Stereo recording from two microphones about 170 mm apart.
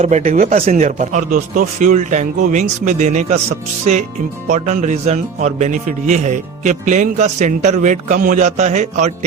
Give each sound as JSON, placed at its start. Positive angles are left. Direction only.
{"t": 0.0, "sound": "speech", "side_deg": -35}
{"t": 0.3, "sound": "speech", "side_deg": -50}